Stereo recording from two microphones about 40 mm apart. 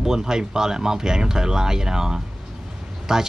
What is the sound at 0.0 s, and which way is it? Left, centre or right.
Speech, centre.